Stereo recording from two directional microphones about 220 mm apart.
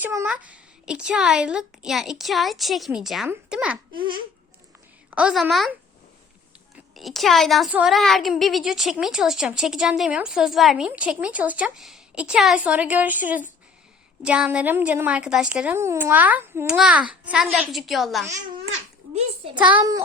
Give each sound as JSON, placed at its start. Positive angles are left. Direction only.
{"t": 0.0, "sound": "a woman's voice", "side_deg": -10}
{"t": 5.1, "sound": "a woman's voice", "side_deg": -5}
{"t": 6.7, "sound": "a woman's voice", "side_deg": 0}
{"t": 19.7, "sound": "a child's voice", "side_deg": -15}